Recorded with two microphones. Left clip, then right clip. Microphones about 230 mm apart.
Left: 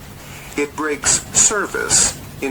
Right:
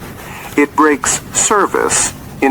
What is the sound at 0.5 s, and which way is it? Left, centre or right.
Speech, right.